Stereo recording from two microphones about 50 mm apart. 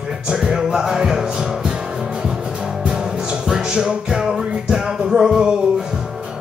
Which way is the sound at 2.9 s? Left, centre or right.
Centre.